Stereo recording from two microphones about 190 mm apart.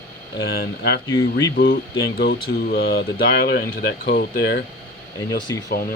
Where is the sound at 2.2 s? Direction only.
55° left (ahead or behind).